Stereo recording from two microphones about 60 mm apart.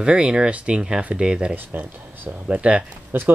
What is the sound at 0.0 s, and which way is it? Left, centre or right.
Speech, centre.